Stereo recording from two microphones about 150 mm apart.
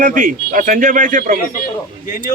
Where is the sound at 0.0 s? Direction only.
60° right (ahead or behind).